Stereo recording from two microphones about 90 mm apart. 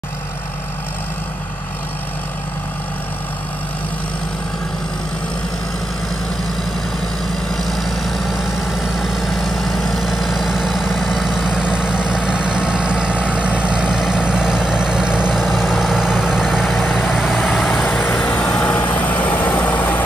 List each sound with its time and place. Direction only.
7.4 s vehicle: 5° left (ahead or behind)
17.7 s vehicle: 20° left (ahead or behind)